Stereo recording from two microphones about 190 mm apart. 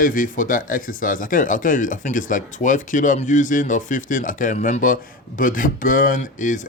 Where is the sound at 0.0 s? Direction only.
45° left (ahead or behind).